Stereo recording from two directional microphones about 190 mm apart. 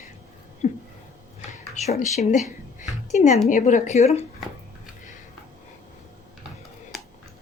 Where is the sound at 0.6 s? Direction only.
35° left (ahead or behind).